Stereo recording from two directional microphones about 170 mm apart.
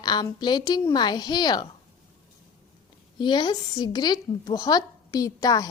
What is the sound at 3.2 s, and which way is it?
A woman's voice, 25° left (ahead or behind).